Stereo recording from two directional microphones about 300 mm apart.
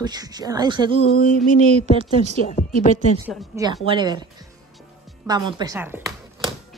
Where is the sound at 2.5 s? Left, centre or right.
Left.